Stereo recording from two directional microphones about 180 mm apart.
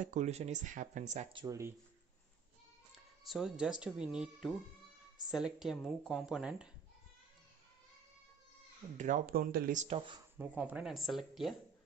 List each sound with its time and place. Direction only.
0.0 s speech: 40° right (ahead or behind)
1.3 s speech: 20° right (ahead or behind)
2.9 s music: centre (ahead or behind)
3.8 s speech: 5° right (ahead or behind)
8.9 s speech: 45° right (ahead or behind); by 10.2 s 30° right (ahead or behind)
10.3 s speech: 10° right (ahead or behind)